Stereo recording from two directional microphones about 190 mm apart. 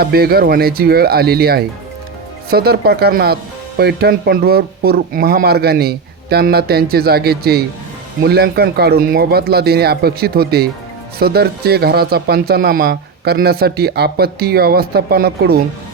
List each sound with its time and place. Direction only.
0.0 s speech: 55° right (ahead or behind)